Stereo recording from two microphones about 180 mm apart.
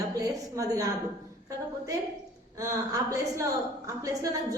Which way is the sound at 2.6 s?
20° right (ahead or behind).